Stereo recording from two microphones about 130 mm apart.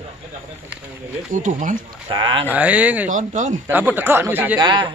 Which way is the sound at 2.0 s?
40° right (ahead or behind).